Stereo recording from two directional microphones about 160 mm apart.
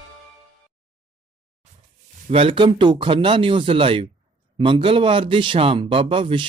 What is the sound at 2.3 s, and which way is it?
A man's voice, 35° right (ahead or behind).